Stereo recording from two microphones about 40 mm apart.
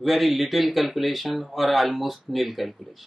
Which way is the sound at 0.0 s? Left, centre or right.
Centre.